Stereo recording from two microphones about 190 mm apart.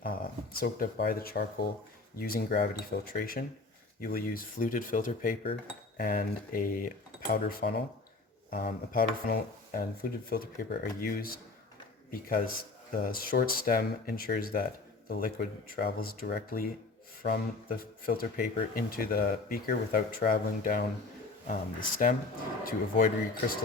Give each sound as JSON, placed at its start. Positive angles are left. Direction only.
{"t": 0.0, "sound": "speech", "side_deg": 50}
{"t": 7.3, "sound": "speech", "side_deg": 60}
{"t": 8.4, "sound": "speech", "side_deg": 50}